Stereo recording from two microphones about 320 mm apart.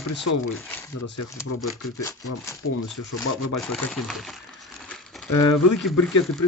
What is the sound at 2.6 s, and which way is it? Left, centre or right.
Speech, left.